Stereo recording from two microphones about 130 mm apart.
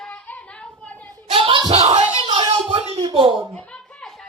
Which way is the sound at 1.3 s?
40° right (ahead or behind).